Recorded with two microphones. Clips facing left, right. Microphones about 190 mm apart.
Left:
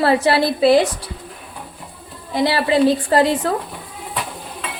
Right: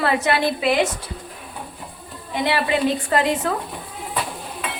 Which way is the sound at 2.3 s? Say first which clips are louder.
Left 4 dB; 35° left (ahead or behind).